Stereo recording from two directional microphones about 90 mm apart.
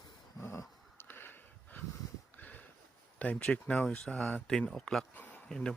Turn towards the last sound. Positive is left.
turn(degrees=5)  # may be behind; listen again after turning